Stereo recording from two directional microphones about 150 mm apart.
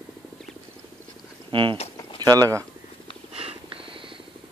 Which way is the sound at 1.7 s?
40° left (ahead or behind).